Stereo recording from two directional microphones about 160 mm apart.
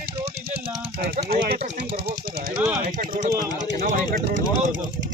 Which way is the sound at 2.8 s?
65° right (ahead or behind).